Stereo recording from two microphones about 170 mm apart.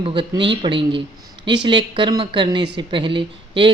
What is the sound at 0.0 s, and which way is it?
A woman's voice, 30° right (ahead or behind).